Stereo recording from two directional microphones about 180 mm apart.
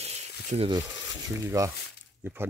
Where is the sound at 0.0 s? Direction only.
35° right (ahead or behind).